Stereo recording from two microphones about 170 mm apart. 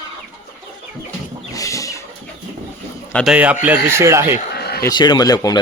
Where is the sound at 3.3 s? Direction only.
10° right (ahead or behind).